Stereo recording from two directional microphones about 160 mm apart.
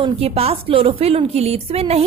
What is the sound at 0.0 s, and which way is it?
A woman's voice, 40° right (ahead or behind).